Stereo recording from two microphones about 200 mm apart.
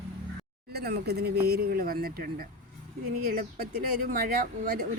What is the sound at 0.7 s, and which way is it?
A woman's voice, 55° right (ahead or behind).